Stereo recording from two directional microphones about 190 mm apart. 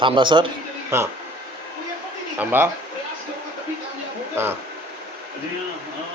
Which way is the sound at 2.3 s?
10° right (ahead or behind).